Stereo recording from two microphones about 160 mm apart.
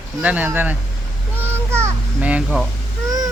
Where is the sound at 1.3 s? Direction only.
15° right (ahead or behind).